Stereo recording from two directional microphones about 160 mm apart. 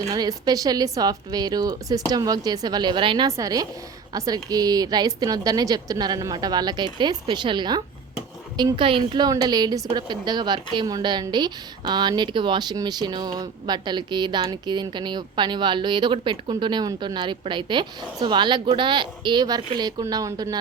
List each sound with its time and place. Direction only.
0.1 s a woman's voice: 25° right (ahead or behind)